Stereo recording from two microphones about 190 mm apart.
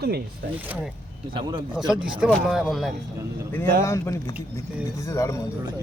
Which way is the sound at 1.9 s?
5° right (ahead or behind).